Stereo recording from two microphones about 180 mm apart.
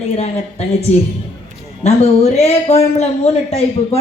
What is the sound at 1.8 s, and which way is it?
Speech, 35° left (ahead or behind).